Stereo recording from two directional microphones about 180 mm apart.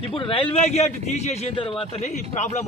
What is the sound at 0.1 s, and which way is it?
Speech, 30° left (ahead or behind).